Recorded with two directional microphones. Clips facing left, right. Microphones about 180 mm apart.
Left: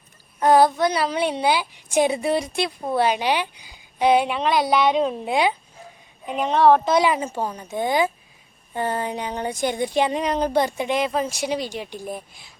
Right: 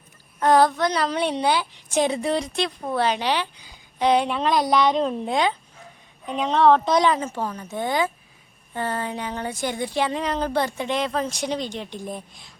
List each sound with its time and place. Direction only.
0.3 s a woman's voice: 10° left (ahead or behind)